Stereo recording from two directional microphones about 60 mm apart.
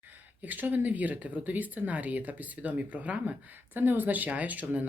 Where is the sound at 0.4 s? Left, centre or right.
Right.